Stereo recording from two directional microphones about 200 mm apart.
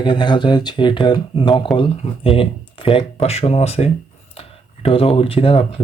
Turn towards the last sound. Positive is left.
turn(degrees=30)  # may be behind; listen again after turning